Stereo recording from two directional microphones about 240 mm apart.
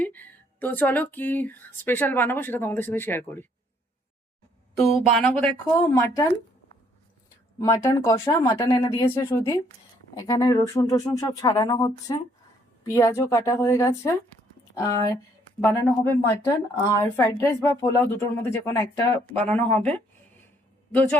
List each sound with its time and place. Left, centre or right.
0.0 s speech: centre
4.8 s speech: centre
5.8 s speech: centre
7.6 s speech: centre
8.8 s speech: left